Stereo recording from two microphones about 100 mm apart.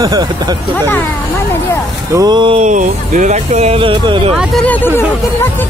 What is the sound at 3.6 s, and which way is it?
Speech, 70° right (ahead or behind).